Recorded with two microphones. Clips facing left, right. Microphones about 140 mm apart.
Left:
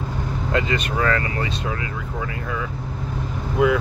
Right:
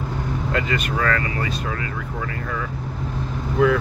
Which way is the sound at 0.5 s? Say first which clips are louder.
Left 2 dB; 25° left (ahead or behind).